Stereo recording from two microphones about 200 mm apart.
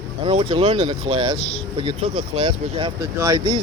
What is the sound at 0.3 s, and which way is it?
Speech, 25° right (ahead or behind).